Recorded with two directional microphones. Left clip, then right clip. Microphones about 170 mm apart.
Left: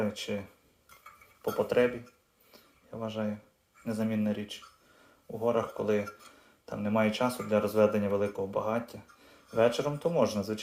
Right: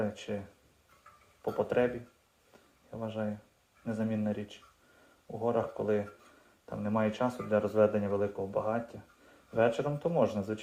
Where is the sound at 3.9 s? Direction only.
5° left (ahead or behind).